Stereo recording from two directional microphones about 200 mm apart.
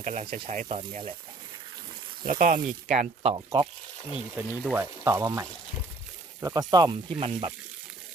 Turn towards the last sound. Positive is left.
turn(degrees=-25)  # may be behind; listen again after turning